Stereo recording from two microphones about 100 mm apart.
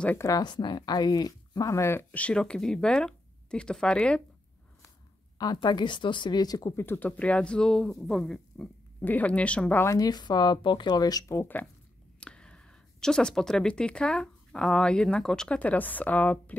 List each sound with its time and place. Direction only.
0.4 s speech: 50° left (ahead or behind); by 4.2 s 10° left (ahead or behind)
5.4 s speech: 45° left (ahead or behind)
6.8 s speech: 20° left (ahead or behind); by 8.6 s 5° left (ahead or behind)
9.0 s speech: 15° left (ahead or behind)
9.8 s speech: 40° left (ahead or behind)
11.3 s speech: 20° left (ahead or behind)